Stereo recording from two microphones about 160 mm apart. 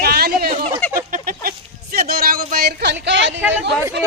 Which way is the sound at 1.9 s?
70° right (ahead or behind).